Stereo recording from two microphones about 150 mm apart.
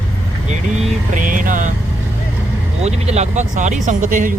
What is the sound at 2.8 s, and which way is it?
Speech, 45° right (ahead or behind).